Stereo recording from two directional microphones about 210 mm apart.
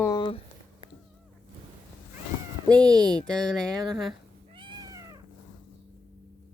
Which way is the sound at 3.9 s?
Centre (ahead or behind).